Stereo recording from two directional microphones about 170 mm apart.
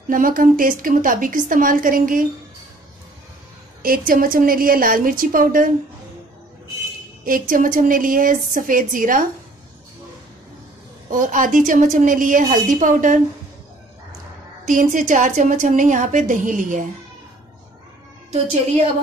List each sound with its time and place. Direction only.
0.1 s a woman's voice: 55° right (ahead or behind)
3.8 s a woman's voice: 55° right (ahead or behind)
7.2 s a woman's voice: 55° right (ahead or behind)
11.1 s a woman's voice: 50° right (ahead or behind)
14.7 s a woman's voice: 50° right (ahead or behind)